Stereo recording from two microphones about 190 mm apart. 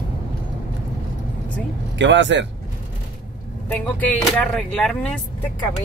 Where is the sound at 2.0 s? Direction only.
70° right (ahead or behind).